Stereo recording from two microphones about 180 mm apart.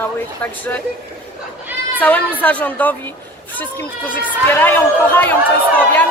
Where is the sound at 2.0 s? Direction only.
10° left (ahead or behind).